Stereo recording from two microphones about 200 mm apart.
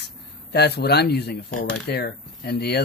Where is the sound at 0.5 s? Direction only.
55° left (ahead or behind).